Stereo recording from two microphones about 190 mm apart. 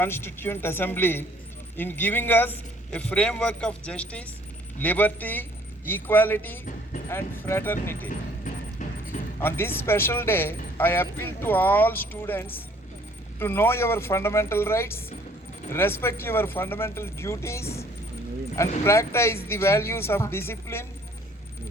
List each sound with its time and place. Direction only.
0.0 s speech: 10° left (ahead or behind)
8.5 s vehicle: 45° left (ahead or behind)
9.4 s speech: 10° left (ahead or behind)
18.9 s speech: 15° left (ahead or behind)